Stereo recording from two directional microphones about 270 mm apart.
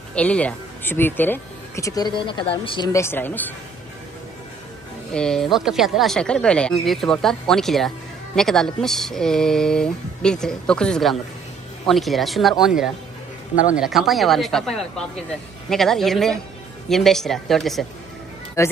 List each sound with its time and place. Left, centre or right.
0.1 s speech: centre
5.1 s speech: centre
18.6 s speech: centre